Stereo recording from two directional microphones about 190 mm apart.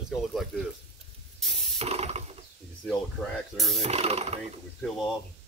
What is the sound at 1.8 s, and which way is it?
Ratchet, 35° right (ahead or behind).